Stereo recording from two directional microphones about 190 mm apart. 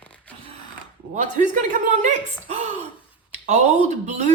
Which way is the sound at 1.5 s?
40° right (ahead or behind).